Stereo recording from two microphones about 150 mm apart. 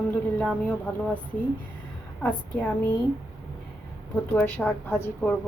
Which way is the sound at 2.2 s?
10° left (ahead or behind).